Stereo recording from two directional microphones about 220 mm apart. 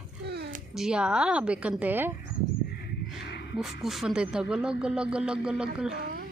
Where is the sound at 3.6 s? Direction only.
Centre (ahead or behind).